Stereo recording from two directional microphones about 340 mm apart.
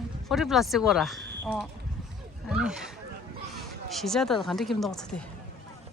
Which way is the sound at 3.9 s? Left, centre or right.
Centre.